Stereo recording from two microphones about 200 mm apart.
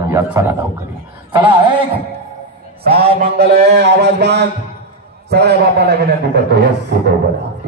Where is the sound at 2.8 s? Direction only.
50° right (ahead or behind).